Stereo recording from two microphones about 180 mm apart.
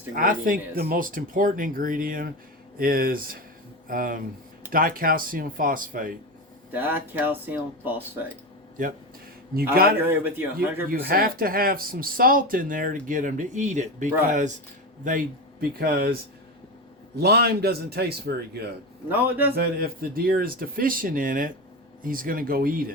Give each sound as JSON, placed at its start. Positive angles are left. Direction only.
{"t": 0.1, "sound": "speech", "side_deg": -50}
{"t": 6.7, "sound": "speech", "side_deg": -10}
{"t": 9.7, "sound": "a man's voice", "side_deg": -55}
{"t": 10.0, "sound": "speech", "side_deg": -10}
{"t": 10.8, "sound": "a man's voice", "side_deg": -55}
{"t": 17.2, "sound": "a man's voice", "side_deg": -65}
{"t": 19.1, "sound": "speech", "side_deg": -10}
{"t": 19.5, "sound": "speech", "side_deg": -55}